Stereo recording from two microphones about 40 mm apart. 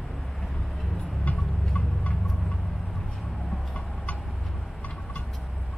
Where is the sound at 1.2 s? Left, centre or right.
Left.